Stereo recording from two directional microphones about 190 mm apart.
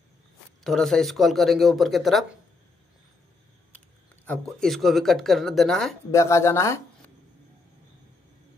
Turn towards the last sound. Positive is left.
turn(degrees=15)  # may be behind; listen again after turning